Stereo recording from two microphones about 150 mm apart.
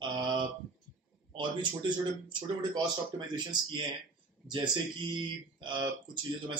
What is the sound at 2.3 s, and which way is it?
Speech, 30° right (ahead or behind).